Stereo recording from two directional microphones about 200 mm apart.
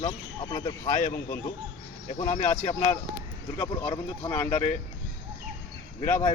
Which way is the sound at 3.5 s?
5° left (ahead or behind).